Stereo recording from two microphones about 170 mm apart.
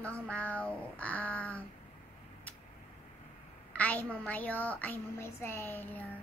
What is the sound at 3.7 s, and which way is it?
A woman's voice, 10° left (ahead or behind).